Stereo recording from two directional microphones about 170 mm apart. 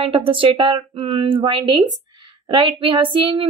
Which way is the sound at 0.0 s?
30° right (ahead or behind).